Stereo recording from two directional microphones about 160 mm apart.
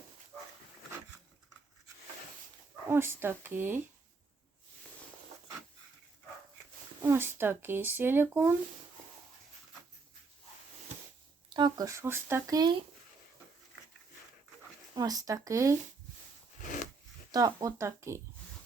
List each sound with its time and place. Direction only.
2.9 s speech: 15° right (ahead or behind)
7.0 s speech: 15° right (ahead or behind)
11.4 s speech: 25° right (ahead or behind)
14.9 s speech: 25° right (ahead or behind)
16.6 s a sound: 55° left (ahead or behind)
17.3 s speech: 20° right (ahead or behind)